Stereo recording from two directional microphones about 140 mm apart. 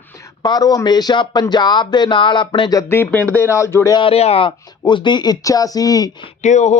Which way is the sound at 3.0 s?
15° left (ahead or behind).